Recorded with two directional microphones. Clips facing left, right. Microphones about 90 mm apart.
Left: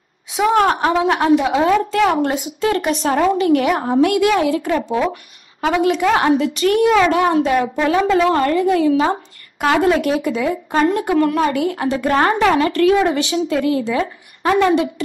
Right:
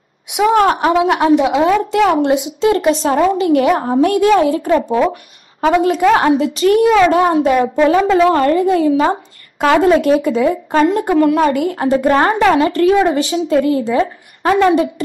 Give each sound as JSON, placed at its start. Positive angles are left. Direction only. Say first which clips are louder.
{"t": 0.4, "sound": "a woman's voice", "louder": "right 3 dB", "side_deg": -10}
{"t": 10.9, "sound": "a woman's voice", "louder": "right 4 dB", "side_deg": -35}